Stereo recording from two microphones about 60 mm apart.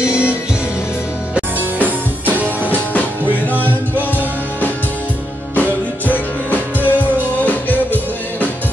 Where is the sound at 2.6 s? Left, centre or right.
Left.